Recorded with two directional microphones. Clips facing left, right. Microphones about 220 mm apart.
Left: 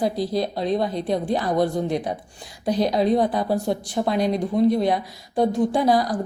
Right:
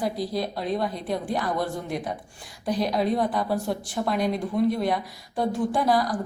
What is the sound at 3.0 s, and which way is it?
Speech, 25° left (ahead or behind).